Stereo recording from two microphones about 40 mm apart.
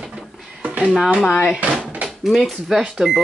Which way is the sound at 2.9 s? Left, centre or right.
Centre.